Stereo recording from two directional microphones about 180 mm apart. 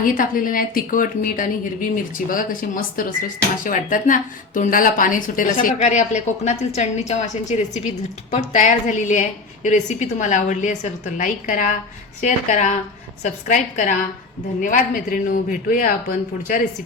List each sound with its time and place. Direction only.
0.0 s a woman's voice: 50° left (ahead or behind)